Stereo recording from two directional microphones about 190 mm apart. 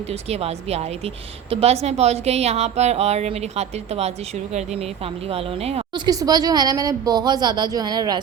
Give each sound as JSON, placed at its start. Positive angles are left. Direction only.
{"t": 0.1, "sound": "a woman's voice", "side_deg": -30}
{"t": 5.3, "sound": "speech", "side_deg": -30}
{"t": 6.1, "sound": "a woman's voice", "side_deg": -20}